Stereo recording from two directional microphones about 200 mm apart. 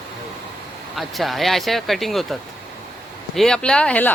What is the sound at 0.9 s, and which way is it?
Speech, centre (ahead or behind).